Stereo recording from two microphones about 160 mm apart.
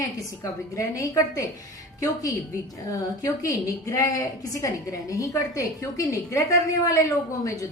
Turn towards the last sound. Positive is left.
turn(degrees=20)  # may be behind; listen again after turning